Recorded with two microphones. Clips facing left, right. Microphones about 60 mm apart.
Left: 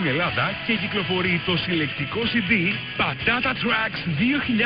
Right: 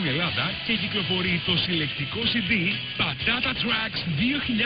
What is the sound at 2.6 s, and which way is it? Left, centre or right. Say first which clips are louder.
Speech: left 4 dB; left.